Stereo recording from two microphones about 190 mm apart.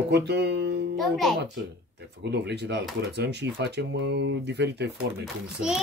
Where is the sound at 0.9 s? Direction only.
Centre (ahead or behind).